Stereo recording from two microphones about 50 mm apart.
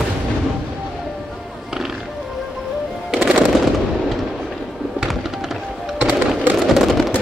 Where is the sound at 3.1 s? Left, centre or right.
Right.